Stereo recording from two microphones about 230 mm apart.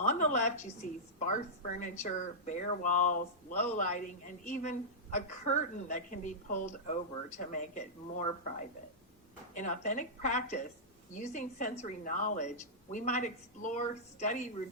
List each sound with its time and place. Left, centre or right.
0.0 s a sound: left
1.3 s speech: left
9.6 s speech: left